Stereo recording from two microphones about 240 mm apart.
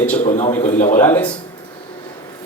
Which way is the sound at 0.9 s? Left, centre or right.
Centre.